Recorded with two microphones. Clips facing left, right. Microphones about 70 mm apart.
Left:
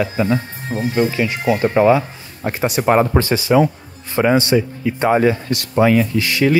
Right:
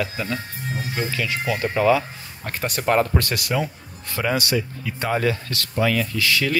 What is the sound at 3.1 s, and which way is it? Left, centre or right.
Speech, left.